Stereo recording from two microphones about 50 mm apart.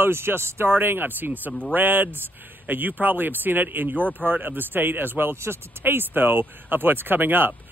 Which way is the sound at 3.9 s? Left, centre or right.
Left.